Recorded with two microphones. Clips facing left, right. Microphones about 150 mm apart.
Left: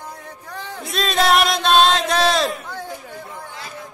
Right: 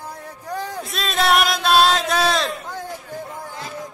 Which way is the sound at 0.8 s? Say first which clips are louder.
Left 5 dB; centre (ahead or behind).